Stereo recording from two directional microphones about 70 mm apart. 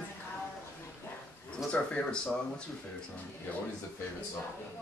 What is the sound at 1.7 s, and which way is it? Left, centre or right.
Speech, centre.